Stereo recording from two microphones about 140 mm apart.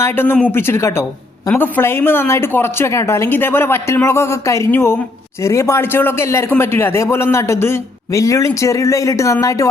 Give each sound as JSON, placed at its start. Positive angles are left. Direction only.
{"t": 0.0, "sound": "a woman's voice", "side_deg": 15}